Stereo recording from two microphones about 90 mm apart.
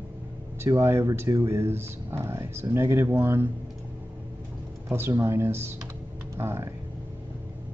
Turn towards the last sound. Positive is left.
turn(degrees=-30)  # may be behind; listen again after turning